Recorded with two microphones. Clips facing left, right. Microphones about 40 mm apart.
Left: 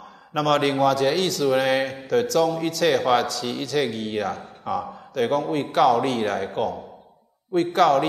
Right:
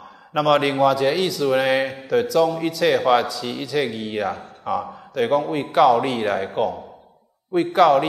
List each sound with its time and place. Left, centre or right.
0.3 s a man's voice: centre